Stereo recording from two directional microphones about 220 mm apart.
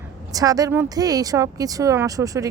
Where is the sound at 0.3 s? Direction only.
15° right (ahead or behind).